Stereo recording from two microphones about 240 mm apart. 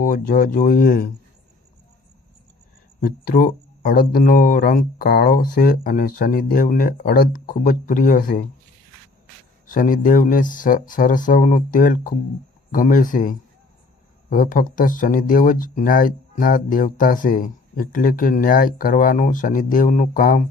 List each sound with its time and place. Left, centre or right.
0.0 s speech: left
3.0 s speech: left
9.6 s speech: left